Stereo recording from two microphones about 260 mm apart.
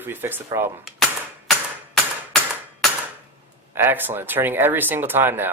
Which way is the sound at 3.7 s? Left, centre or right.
Centre.